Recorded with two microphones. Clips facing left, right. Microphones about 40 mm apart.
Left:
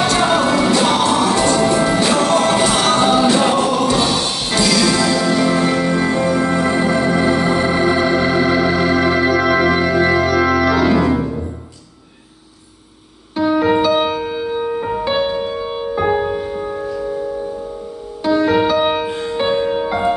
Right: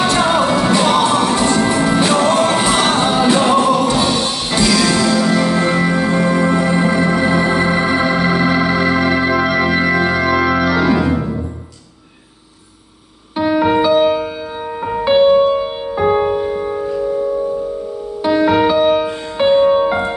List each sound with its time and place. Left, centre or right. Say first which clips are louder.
0.1 s music: right 1 dB; centre
9.5 s organ: even; centre
10.5 s organ: even; centre
13.6 s music: right 2 dB; centre
14.5 s music: left 2 dB; centre
18.2 s music: right 1 dB; right
18.5 s music: right 2 dB; centre
18.8 s music: right 4 dB; centre
19.3 s music: right 7 dB; centre